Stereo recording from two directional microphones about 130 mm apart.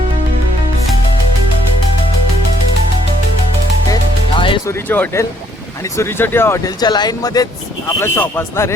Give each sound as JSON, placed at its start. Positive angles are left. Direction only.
{"t": 4.4, "sound": "music", "side_deg": 40}
{"t": 4.6, "sound": "speech", "side_deg": 15}
{"t": 6.7, "sound": "speech", "side_deg": 30}
{"t": 7.9, "sound": "speech", "side_deg": 20}